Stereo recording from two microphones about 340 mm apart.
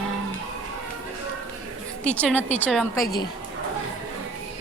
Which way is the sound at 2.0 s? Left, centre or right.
Centre.